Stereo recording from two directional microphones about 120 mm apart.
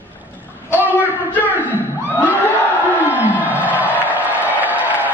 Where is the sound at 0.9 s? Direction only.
15° left (ahead or behind).